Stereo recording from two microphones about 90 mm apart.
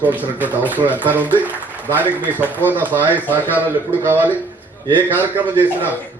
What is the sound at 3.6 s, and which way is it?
A man's voice, 20° right (ahead or behind).